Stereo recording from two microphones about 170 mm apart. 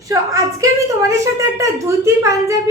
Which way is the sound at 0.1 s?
20° right (ahead or behind).